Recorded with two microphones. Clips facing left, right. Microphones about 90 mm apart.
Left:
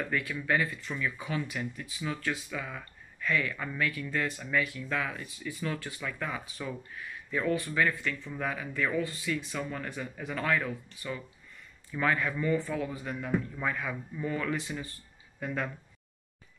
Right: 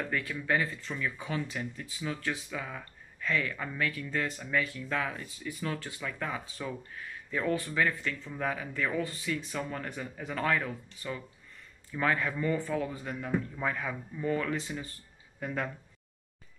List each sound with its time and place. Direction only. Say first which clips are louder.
0.1 s speech: left 1 dB; 30° right (ahead or behind)